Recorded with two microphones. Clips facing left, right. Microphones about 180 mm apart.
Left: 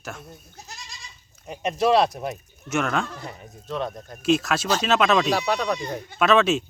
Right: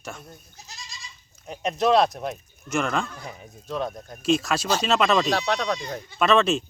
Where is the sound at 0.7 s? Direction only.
60° left (ahead or behind).